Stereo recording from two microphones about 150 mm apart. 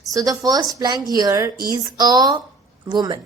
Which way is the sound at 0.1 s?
25° right (ahead or behind).